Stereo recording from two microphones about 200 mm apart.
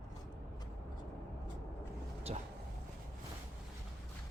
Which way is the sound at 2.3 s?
30° right (ahead or behind).